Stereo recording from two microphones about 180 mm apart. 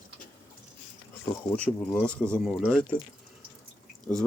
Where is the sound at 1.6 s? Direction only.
5° left (ahead or behind).